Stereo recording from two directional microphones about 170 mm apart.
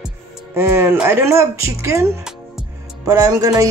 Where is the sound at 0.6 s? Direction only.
15° right (ahead or behind).